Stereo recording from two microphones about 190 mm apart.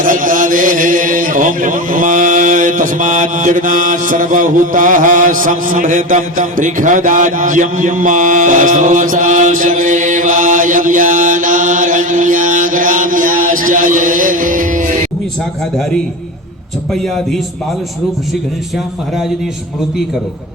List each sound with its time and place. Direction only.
0.0 s chant: 45° right (ahead or behind)
16.9 s speech: centre (ahead or behind)